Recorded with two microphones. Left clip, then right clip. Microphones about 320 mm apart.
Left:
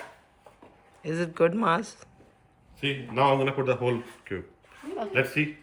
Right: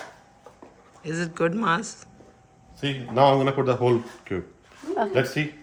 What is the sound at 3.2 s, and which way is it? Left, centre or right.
Speech, centre.